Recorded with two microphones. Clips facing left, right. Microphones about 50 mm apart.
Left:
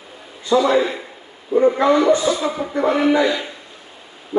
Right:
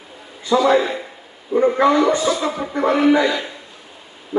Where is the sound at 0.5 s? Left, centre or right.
Centre.